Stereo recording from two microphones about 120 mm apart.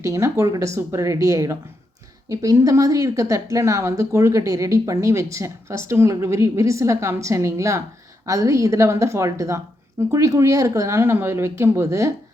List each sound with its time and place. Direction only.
0.0 s speech: 25° right (ahead or behind)